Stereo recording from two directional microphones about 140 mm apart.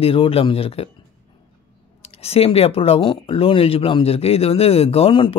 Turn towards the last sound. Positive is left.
turn(degrees=35)  # may be behind; listen again after turning